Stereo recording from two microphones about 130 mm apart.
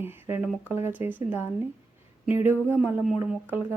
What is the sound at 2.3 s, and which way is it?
A woman's voice, 15° right (ahead or behind).